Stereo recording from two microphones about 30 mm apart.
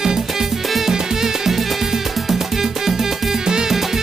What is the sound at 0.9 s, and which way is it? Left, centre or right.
Music, centre.